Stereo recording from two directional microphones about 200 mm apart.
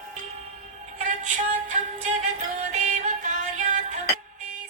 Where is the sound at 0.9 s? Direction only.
40° right (ahead or behind).